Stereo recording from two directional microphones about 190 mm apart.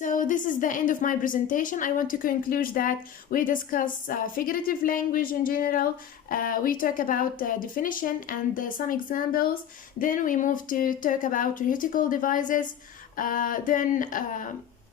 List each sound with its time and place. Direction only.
0.0 s a woman's voice: 45° left (ahead or behind)